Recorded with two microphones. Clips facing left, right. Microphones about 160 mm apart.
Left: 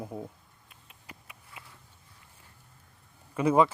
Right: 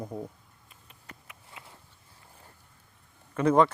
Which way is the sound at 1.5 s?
25° right (ahead or behind).